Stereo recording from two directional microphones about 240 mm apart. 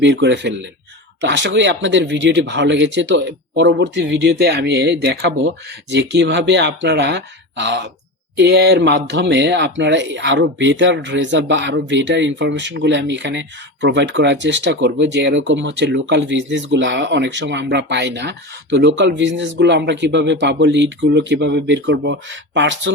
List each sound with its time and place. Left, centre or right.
0.0 s speech: right